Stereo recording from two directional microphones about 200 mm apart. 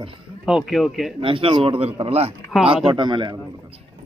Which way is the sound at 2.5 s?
Centre (ahead or behind).